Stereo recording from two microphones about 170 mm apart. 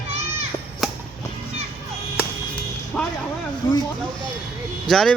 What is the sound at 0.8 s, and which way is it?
Music, centre (ahead or behind).